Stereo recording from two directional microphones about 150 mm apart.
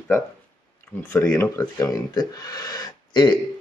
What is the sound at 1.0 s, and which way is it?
A man's voice, 15° left (ahead or behind).